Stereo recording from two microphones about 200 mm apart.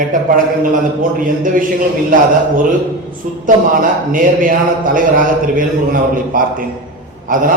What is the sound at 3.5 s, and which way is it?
Speech, 40° right (ahead or behind).